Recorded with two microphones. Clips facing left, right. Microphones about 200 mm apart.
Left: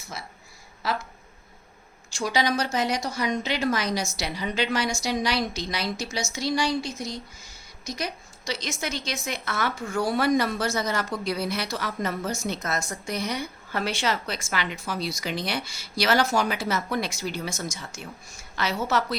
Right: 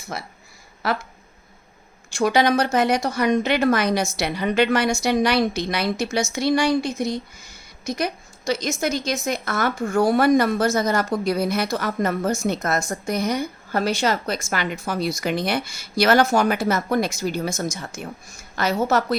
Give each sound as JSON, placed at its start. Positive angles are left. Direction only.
{"t": 0.1, "sound": "a woman's voice", "side_deg": -60}
{"t": 2.1, "sound": "a woman's voice", "side_deg": -55}